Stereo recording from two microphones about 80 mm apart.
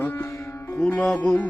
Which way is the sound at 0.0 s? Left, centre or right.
Left.